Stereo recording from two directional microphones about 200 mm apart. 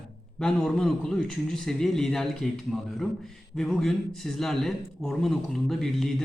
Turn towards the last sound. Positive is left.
turn(degrees=0)  # may be behind; listen again after turning